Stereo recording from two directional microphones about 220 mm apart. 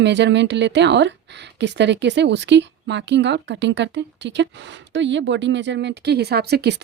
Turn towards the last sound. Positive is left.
turn(degrees=-50)  # may be behind; listen again after turning